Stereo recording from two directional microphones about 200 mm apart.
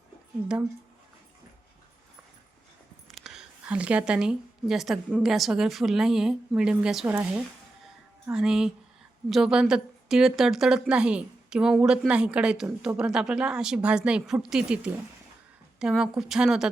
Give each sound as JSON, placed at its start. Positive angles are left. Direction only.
{"t": 3.1, "sound": "a woman's voice", "side_deg": 0}